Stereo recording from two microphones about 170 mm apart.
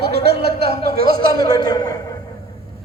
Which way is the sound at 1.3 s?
20° left (ahead or behind).